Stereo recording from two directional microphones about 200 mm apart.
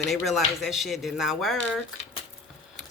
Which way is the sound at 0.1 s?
Centre (ahead or behind).